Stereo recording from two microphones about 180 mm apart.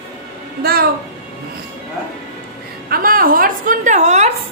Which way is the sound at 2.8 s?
55° right (ahead or behind).